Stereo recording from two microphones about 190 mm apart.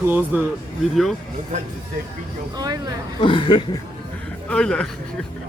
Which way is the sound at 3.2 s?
25° left (ahead or behind).